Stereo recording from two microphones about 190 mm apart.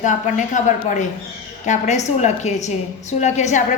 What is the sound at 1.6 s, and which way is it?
A woman's voice, 40° left (ahead or behind).